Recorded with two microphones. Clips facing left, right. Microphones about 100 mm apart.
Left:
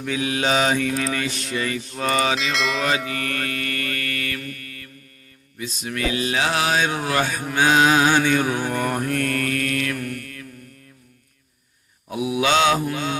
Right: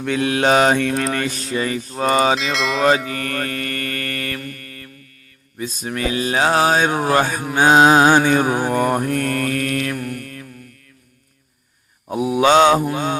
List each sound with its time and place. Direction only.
0.0 s mantra: 60° right (ahead or behind)
1.4 s mantra: 35° right (ahead or behind)
2.4 s a sound: centre (ahead or behind)
2.8 s mantra: 40° right (ahead or behind)
12.0 s mantra: 45° right (ahead or behind)